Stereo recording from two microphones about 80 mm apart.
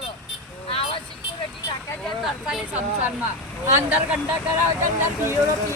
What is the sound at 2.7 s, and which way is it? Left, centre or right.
Speech, right.